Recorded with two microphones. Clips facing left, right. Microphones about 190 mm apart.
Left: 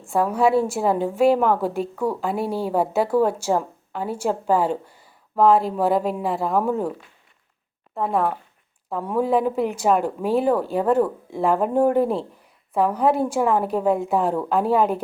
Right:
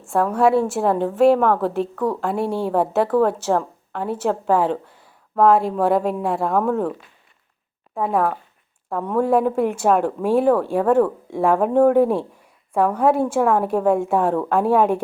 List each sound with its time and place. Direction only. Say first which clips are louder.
0.1 s a woman's voice: right 2 dB; 5° left (ahead or behind)
7.9 s a woman's voice: right 2 dB; centre (ahead or behind)